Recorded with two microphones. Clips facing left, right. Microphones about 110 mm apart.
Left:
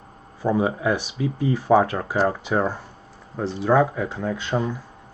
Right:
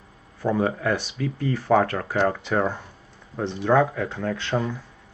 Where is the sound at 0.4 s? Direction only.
15° left (ahead or behind).